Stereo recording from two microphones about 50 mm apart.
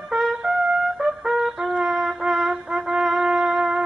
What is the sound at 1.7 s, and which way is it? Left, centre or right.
Wind instrument, centre.